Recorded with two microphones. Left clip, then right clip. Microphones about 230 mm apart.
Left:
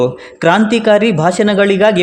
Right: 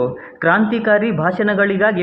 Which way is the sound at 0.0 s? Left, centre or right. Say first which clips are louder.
Left 5 dB; left.